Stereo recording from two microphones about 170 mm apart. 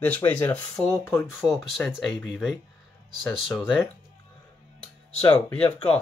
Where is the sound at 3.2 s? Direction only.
5° left (ahead or behind).